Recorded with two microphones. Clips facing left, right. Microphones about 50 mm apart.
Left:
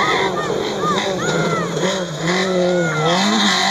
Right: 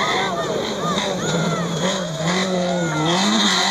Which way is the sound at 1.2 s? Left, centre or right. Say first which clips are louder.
Left 3 dB; left.